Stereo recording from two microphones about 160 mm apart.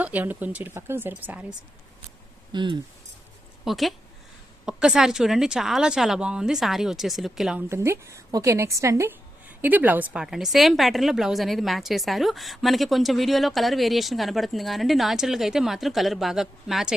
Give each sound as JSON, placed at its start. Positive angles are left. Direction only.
{"t": 0.0, "sound": "speech", "side_deg": -10}
{"t": 2.5, "sound": "speech", "side_deg": -30}
{"t": 3.6, "sound": "a woman's voice", "side_deg": 0}
{"t": 7.7, "sound": "a woman's voice", "side_deg": -15}